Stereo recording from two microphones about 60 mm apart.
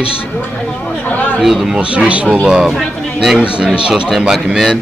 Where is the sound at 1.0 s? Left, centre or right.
Left.